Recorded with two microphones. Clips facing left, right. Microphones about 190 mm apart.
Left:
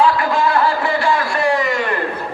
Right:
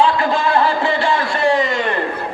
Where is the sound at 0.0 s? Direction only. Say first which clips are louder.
Even; 25° right (ahead or behind).